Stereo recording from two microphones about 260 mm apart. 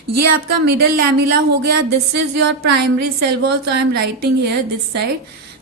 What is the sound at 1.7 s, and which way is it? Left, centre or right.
Speech, right.